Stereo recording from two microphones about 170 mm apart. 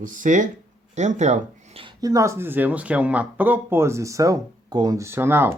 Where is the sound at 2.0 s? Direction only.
20° right (ahead or behind).